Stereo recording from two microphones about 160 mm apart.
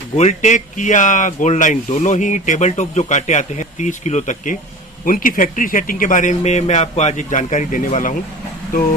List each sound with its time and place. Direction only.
0.2 s speech: 45° left (ahead or behind)
5.0 s speech: 60° left (ahead or behind)